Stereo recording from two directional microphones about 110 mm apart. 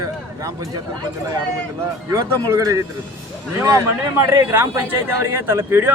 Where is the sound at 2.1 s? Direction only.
30° right (ahead or behind).